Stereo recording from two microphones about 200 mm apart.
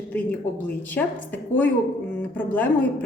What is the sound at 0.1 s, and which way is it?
Speech, 10° left (ahead or behind).